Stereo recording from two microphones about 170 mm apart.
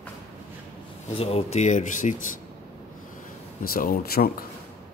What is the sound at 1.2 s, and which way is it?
Speech, 35° left (ahead or behind).